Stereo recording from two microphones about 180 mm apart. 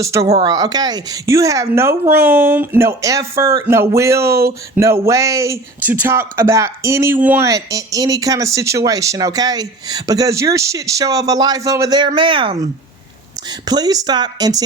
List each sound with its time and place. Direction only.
0.0 s a woman's voice: 15° right (ahead or behind)
13.7 s speech: 20° right (ahead or behind)